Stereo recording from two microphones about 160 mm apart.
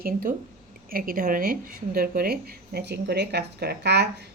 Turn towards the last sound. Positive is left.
turn(degrees=-90)